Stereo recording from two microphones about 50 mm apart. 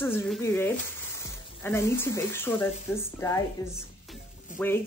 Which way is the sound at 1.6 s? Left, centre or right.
Left.